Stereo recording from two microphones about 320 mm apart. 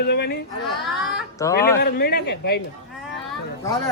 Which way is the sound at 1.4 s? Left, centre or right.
Centre.